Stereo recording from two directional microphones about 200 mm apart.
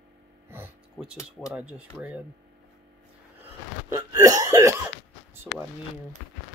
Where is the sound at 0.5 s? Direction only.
10° right (ahead or behind).